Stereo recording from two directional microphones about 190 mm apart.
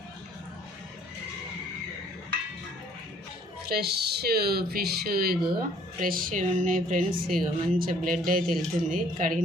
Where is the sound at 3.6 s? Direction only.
55° right (ahead or behind).